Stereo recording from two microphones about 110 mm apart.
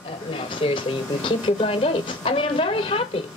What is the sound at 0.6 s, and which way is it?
Speech, 55° left (ahead or behind).